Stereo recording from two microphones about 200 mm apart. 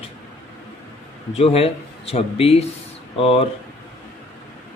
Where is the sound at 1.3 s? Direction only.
30° left (ahead or behind).